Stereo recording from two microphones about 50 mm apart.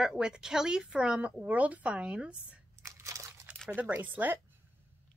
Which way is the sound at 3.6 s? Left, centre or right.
Right.